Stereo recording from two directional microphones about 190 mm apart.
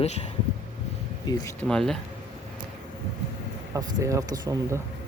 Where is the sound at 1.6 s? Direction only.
5° left (ahead or behind).